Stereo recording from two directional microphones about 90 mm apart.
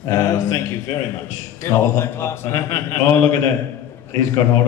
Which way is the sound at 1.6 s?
25° left (ahead or behind).